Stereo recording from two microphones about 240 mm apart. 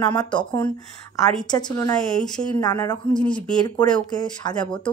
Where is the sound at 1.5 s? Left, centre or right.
Centre.